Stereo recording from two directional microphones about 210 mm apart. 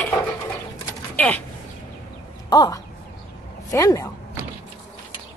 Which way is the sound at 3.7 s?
15° left (ahead or behind).